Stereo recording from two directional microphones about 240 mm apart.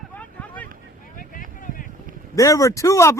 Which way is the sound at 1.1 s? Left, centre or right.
Left.